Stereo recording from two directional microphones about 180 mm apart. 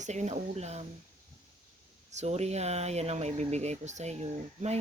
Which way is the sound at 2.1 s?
40° right (ahead or behind).